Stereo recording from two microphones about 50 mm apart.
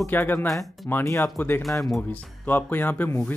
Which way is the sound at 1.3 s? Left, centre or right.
Left.